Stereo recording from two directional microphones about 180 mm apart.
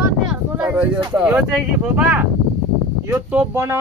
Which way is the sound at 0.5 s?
10° right (ahead or behind).